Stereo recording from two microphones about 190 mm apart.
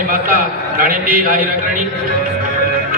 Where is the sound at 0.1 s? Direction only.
50° right (ahead or behind).